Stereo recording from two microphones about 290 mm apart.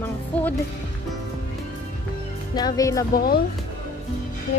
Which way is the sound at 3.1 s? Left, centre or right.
Left.